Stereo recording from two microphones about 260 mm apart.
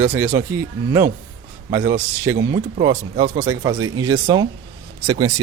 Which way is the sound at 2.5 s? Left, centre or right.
Centre.